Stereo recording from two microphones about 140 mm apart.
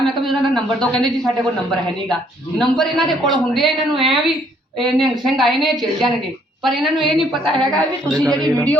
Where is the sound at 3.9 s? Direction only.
35° right (ahead or behind).